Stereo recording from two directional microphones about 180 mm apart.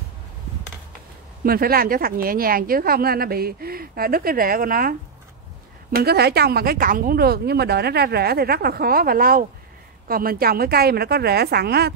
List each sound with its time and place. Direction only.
1.4 s speech: 55° right (ahead or behind)